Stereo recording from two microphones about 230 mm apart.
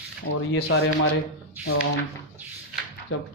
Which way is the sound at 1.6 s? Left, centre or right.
Centre.